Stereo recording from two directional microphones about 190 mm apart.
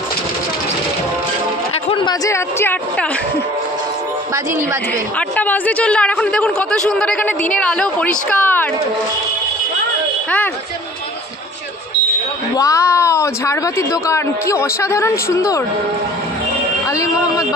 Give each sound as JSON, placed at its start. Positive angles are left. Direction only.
{"t": 1.9, "sound": "chatter", "side_deg": 30}
{"t": 2.2, "sound": "a woman's voice", "side_deg": 15}
{"t": 5.3, "sound": "speech", "side_deg": 10}
{"t": 12.5, "sound": "a woman's voice", "side_deg": 15}
{"t": 16.9, "sound": "a woman's voice", "side_deg": 15}